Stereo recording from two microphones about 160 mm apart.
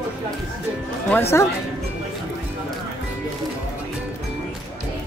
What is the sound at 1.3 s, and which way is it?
Speech, 15° left (ahead or behind).